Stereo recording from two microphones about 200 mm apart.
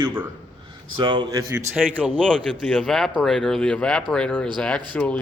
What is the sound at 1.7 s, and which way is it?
A man's voice, 5° right (ahead or behind).